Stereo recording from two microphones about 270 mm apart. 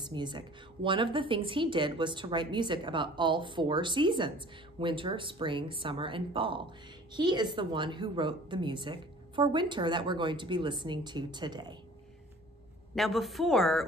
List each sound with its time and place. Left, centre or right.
0.0 s a woman's voice: centre
12.9 s speech: centre